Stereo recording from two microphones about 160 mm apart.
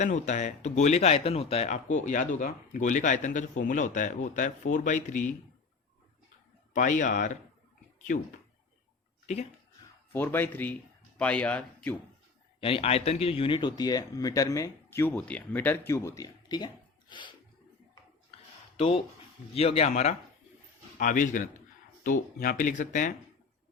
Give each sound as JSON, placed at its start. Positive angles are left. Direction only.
{"t": 0.0, "sound": "speech", "side_deg": 45}
{"t": 6.7, "sound": "speech", "side_deg": 50}
{"t": 9.2, "sound": "speech", "side_deg": 45}
{"t": 10.1, "sound": "speech", "side_deg": 15}
{"t": 12.5, "sound": "speech", "side_deg": 35}
{"t": 18.8, "sound": "speech", "side_deg": 35}